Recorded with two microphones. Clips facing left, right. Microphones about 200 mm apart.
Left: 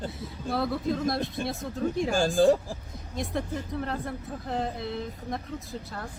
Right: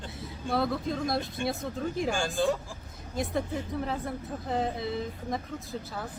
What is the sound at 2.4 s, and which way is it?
Speech, 35° left (ahead or behind).